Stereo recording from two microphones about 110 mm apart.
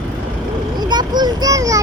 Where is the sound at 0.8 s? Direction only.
40° right (ahead or behind).